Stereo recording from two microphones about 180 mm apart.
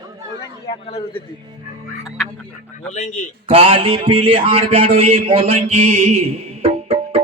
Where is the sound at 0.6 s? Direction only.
30° left (ahead or behind).